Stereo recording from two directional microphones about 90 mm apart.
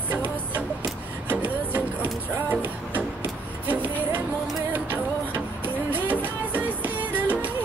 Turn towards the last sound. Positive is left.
turn(degrees=-20)  # may be behind; listen again after turning